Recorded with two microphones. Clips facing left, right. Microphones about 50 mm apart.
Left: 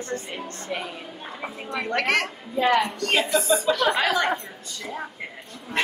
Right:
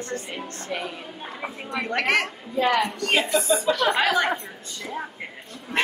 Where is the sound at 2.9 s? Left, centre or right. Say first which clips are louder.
Even; centre.